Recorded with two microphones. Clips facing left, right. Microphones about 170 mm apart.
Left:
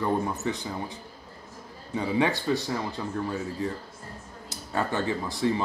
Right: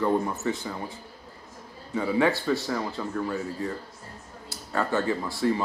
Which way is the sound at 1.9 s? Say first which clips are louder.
Right 2 dB; 20° left (ahead or behind).